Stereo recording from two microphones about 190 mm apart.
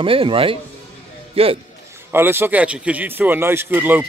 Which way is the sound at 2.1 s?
10° right (ahead or behind).